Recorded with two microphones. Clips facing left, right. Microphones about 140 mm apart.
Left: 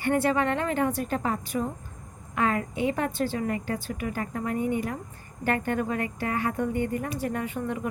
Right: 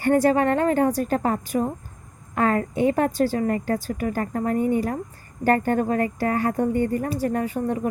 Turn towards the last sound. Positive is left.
turn(degrees=-40)  # may be behind; listen again after turning